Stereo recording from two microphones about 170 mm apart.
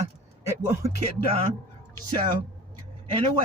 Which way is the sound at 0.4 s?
15° right (ahead or behind).